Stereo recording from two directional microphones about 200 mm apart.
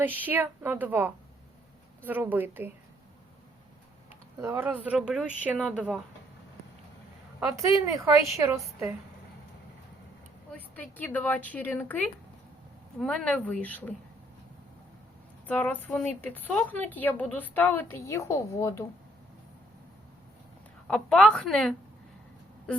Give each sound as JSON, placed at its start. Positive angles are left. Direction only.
{"t": 0.0, "sound": "a woman's voice", "side_deg": -10}
{"t": 4.1, "sound": "a woman's voice", "side_deg": -10}
{"t": 7.3, "sound": "a woman's voice", "side_deg": -15}
{"t": 10.5, "sound": "a woman's voice", "side_deg": 10}
{"t": 15.4, "sound": "a woman's voice", "side_deg": 10}
{"t": 20.8, "sound": "a woman's voice", "side_deg": 5}